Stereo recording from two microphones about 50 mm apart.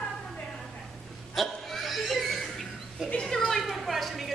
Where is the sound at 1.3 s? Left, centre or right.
Centre.